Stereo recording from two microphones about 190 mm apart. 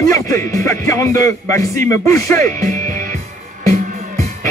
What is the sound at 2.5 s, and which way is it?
Music, 45° right (ahead or behind).